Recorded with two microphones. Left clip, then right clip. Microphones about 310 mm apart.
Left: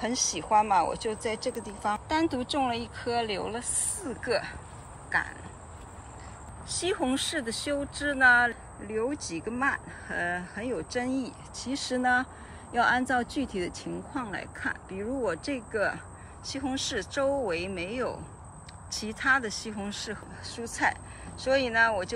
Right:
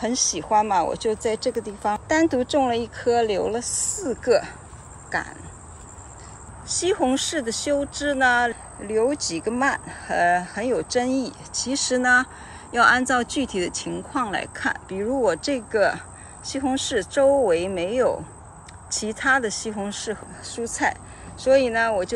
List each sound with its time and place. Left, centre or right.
0.0 s speech: centre
3.0 s speech: right
6.9 s speech: centre
19.2 s speech: centre